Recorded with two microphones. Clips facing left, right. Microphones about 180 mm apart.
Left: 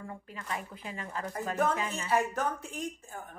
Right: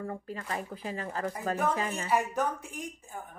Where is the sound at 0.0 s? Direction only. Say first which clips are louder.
Right 6 dB; 40° right (ahead or behind).